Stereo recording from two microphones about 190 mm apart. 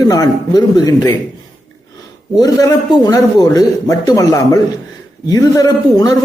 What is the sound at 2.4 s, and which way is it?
A man's voice, 20° left (ahead or behind).